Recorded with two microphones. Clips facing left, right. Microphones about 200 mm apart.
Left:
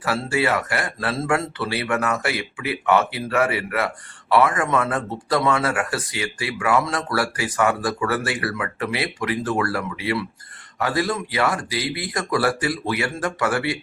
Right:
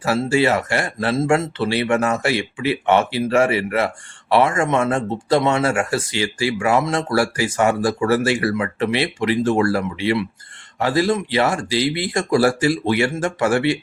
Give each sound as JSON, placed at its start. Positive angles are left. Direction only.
{"t": 0.0, "sound": "speech", "side_deg": -25}